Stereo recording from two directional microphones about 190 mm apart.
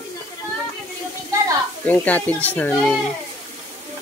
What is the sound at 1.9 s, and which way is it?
Speech, 10° left (ahead or behind).